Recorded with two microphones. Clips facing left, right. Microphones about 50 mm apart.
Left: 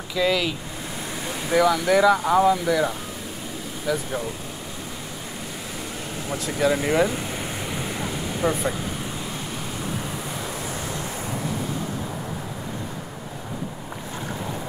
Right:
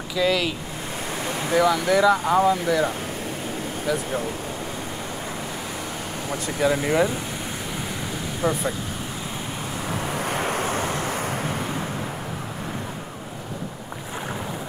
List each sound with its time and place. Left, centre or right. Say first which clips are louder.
0.1 s speech: even; centre
6.3 s speech: even; centre
8.4 s speech: even; centre
10.1 s vehicle: right 6 dB; right